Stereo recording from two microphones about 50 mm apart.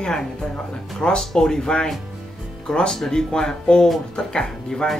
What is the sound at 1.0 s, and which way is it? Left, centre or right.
Speech, centre.